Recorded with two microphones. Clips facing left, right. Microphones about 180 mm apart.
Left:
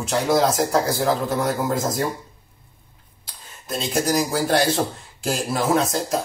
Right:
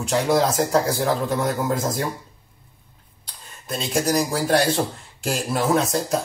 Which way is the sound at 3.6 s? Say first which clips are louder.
Even; centre (ahead or behind).